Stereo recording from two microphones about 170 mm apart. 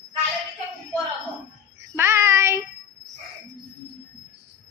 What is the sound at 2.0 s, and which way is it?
Child singing, 15° right (ahead or behind).